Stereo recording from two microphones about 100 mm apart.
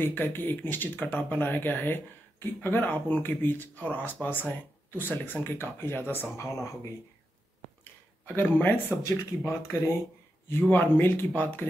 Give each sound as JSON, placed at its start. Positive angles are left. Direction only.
{"t": 0.0, "sound": "speech", "side_deg": 20}
{"t": 8.4, "sound": "speech", "side_deg": 20}